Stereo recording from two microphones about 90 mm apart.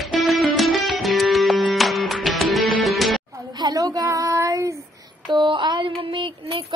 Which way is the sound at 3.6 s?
45° right (ahead or behind).